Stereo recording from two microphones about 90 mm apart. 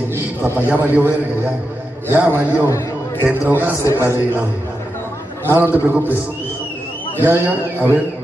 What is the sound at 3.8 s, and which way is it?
Speech, 30° left (ahead or behind).